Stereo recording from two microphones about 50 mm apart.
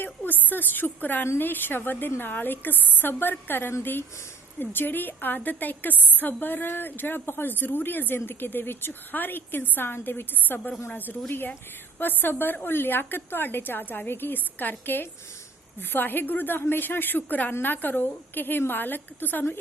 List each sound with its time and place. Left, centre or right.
0.0 s a woman's voice: left